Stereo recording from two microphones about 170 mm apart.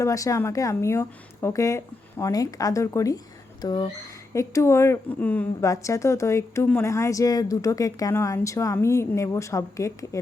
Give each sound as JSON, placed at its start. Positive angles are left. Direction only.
{"t": 0.0, "sound": "a woman's voice", "side_deg": 20}